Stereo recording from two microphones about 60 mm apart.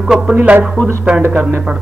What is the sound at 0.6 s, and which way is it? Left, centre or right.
Speech, centre.